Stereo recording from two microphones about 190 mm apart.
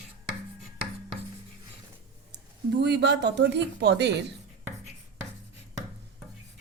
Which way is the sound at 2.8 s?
65° right (ahead or behind).